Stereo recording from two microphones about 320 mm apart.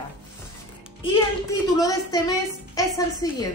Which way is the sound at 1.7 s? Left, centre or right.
Centre.